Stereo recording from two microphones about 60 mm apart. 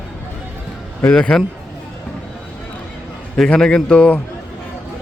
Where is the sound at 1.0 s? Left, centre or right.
Centre.